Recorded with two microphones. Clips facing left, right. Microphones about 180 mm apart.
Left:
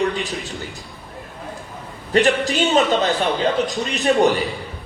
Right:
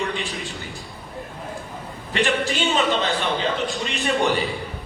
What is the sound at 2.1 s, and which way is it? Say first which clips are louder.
A man's voice: left 5 dB; 40° left (ahead or behind).